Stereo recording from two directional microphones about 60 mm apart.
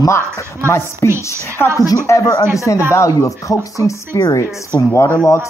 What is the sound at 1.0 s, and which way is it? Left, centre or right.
Speech, left.